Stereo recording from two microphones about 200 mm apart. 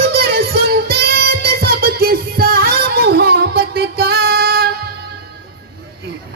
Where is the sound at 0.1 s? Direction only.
50° right (ahead or behind).